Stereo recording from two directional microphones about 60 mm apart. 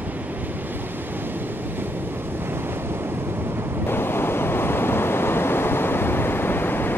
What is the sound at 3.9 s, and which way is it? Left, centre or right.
Waves, left.